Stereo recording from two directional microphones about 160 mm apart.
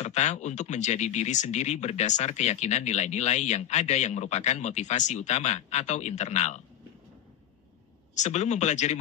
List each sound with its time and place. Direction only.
0.0 s speech: 45° left (ahead or behind)
8.1 s speech: 45° left (ahead or behind)